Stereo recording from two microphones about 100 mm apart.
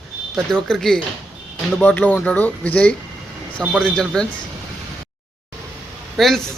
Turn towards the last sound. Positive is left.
turn(degrees=0)  # may be behind; listen again after turning